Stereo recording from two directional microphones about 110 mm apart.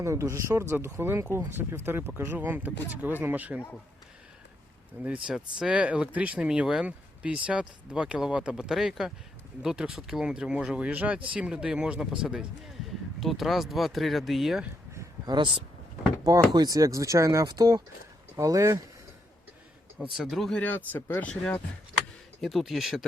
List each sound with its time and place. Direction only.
0.0 s speech: 25° right (ahead or behind)
5.0 s speech: 10° right (ahead or behind)
15.3 s speech: 45° right (ahead or behind)
16.2 s speech: 35° right (ahead or behind)
20.1 s speech: centre (ahead or behind)
20.6 s speech: 15° left (ahead or behind)
22.4 s speech: centre (ahead or behind)